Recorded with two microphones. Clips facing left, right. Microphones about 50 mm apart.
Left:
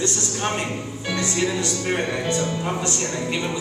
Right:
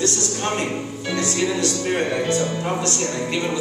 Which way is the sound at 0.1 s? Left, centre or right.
Centre.